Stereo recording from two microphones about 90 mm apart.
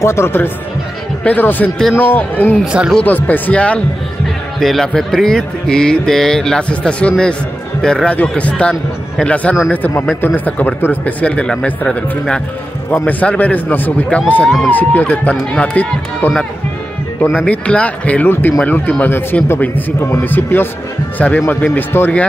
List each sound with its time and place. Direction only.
0.0 s speech: 30° left (ahead or behind)
2.6 s speech: 10° right (ahead or behind)
2.9 s speech: 15° left (ahead or behind)
4.6 s speech: 5° left (ahead or behind)
17.5 s speech: 15° left (ahead or behind)